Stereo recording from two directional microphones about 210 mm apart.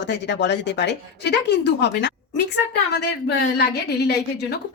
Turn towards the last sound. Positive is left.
turn(degrees=50)  # may be behind; listen again after turning